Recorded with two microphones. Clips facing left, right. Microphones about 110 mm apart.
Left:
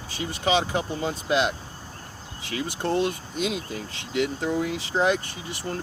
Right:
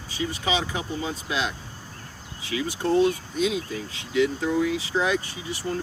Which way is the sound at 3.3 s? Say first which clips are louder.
Right 3 dB; 55° left (ahead or behind).